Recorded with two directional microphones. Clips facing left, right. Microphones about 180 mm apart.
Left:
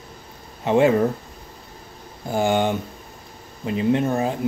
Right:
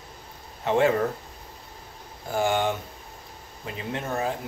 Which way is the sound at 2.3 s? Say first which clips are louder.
Left 4 dB; 20° left (ahead or behind).